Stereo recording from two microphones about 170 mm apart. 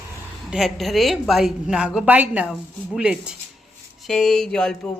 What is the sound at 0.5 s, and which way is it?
A woman's voice, centre (ahead or behind).